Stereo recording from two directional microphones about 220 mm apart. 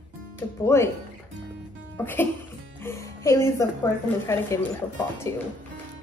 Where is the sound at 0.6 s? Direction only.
10° left (ahead or behind).